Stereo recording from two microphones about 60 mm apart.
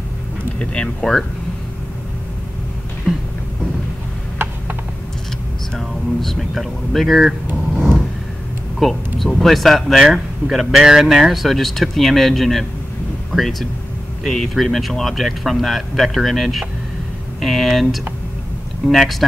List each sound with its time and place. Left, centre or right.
0.8 s speech: centre
3.1 s a sound: centre
4.4 s pulleys: right
5.8 s speech: centre
8.7 s speech: centre